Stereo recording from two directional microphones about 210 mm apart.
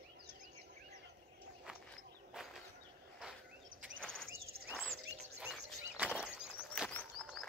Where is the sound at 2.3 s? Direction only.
Centre (ahead or behind).